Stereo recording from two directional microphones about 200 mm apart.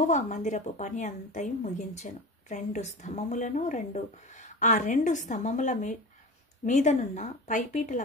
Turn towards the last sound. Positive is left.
turn(degrees=40)  # may be behind; listen again after turning